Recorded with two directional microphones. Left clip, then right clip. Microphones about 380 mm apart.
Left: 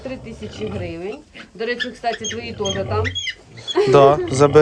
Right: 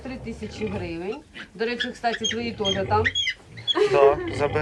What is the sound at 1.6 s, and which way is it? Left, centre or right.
Speech, centre.